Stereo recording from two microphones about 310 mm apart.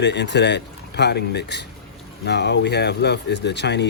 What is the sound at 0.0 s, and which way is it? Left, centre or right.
Speech, left.